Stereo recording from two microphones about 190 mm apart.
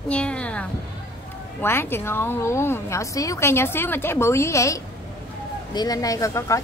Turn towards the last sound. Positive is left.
turn(degrees=15)  # may be behind; listen again after turning